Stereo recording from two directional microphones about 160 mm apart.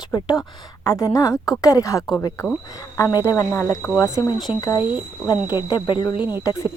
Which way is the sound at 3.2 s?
15° left (ahead or behind).